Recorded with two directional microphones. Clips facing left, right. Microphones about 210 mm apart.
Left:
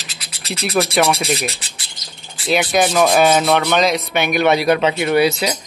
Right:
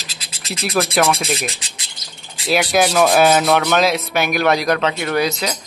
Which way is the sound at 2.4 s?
5° right (ahead or behind).